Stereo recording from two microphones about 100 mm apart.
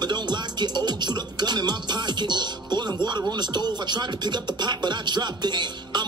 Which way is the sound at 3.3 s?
45° right (ahead or behind).